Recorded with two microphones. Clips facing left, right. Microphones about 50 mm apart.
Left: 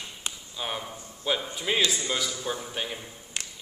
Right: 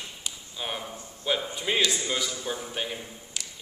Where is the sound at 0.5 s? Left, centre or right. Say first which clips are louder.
Even; centre.